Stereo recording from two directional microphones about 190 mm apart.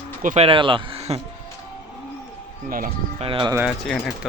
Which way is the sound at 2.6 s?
45° right (ahead or behind).